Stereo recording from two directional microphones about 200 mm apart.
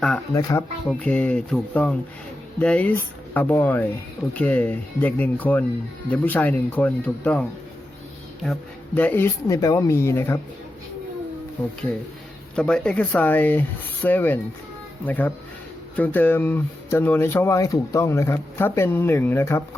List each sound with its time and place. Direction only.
0.3 s speech: 15° left (ahead or behind)
9.0 s speech: 10° left (ahead or behind)
12.5 s speech: 5° left (ahead or behind)